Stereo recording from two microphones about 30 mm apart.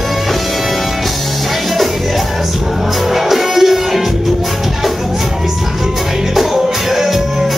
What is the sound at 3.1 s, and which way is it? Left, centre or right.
Music, centre.